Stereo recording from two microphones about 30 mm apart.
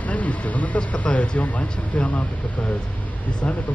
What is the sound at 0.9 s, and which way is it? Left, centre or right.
Speech, left.